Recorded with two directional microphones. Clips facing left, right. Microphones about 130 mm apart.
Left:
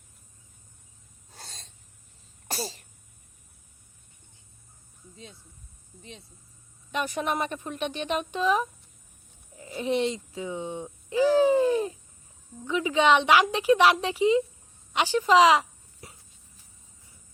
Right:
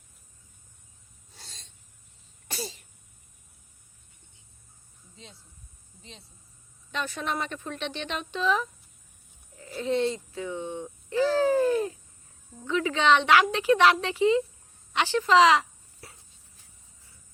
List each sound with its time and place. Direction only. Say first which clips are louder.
1.3 s snort: left 5 dB; 45° left (ahead or behind)
2.5 s sneeze: left 3 dB; 40° left (ahead or behind)
6.9 s a woman's voice: left 3 dB; 15° left (ahead or behind)